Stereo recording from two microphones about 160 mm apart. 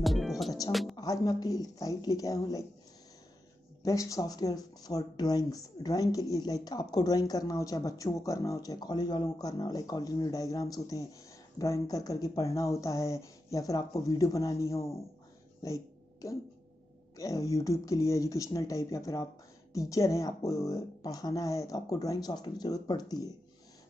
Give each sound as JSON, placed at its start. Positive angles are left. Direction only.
{"t": 0.0, "sound": "music", "side_deg": 0}
{"t": 0.9, "sound": "speech", "side_deg": 25}
{"t": 3.8, "sound": "speech", "side_deg": 20}
{"t": 15.6, "sound": "a sound", "side_deg": 20}
{"t": 17.2, "sound": "speech", "side_deg": 20}